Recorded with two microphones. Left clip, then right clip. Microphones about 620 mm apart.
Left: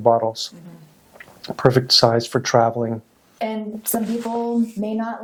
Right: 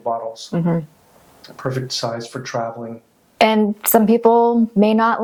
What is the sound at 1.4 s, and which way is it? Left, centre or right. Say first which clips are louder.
Speech: left 8 dB; left.